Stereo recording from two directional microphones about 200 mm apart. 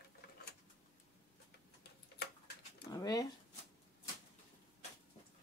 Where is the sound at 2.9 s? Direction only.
20° left (ahead or behind).